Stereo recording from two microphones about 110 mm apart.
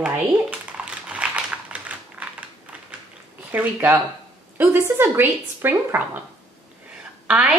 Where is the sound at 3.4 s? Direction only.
15° right (ahead or behind).